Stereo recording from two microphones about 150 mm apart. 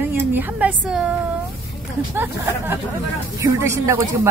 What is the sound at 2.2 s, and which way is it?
Speech, 15° right (ahead or behind).